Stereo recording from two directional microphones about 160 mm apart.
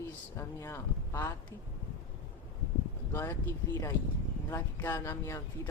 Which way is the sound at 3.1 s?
15° left (ahead or behind).